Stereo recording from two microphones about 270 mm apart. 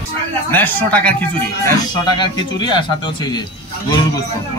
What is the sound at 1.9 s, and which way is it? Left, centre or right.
Speech, centre.